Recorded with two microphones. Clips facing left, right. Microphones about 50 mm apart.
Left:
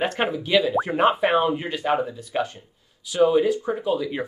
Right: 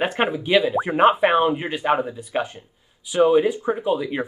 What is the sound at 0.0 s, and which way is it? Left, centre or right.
Speech, centre.